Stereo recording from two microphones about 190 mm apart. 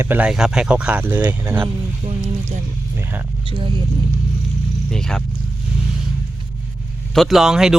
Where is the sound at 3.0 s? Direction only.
10° right (ahead or behind).